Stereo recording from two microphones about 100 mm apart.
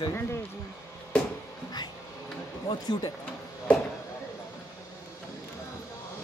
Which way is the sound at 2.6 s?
45° left (ahead or behind).